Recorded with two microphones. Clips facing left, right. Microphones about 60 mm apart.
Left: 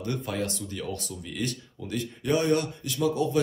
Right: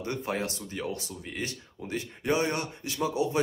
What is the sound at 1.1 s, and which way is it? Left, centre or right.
Speech, right.